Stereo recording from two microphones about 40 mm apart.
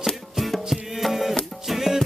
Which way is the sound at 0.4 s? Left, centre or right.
Centre.